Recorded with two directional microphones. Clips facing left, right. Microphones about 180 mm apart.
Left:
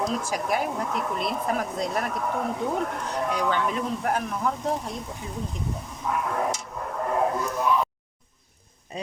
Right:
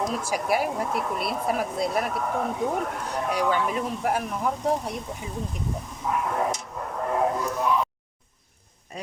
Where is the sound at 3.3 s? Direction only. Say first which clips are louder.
Right 2 dB; 10° right (ahead or behind).